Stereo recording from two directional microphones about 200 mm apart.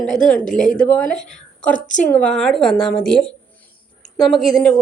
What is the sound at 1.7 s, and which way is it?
Speech, 40° left (ahead or behind).